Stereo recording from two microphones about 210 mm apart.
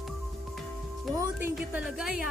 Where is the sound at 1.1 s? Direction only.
15° right (ahead or behind).